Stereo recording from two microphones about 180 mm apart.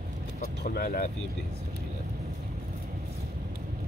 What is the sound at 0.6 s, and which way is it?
Speech, 55° left (ahead or behind).